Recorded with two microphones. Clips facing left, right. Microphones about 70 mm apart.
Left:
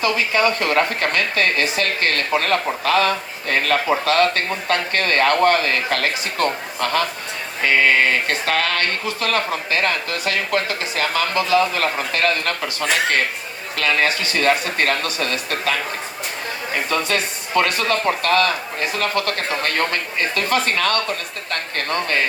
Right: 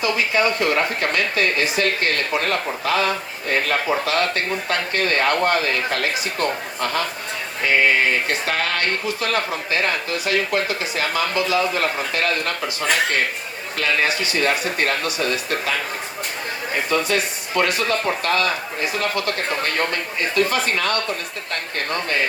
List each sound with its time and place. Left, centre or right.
0.0 s speech: left
7.6 s speech: left
16.9 s speech: left
19.6 s speech: left